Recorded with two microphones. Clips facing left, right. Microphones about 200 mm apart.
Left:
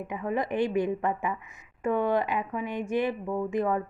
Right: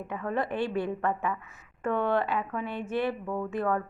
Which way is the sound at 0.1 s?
15° left (ahead or behind).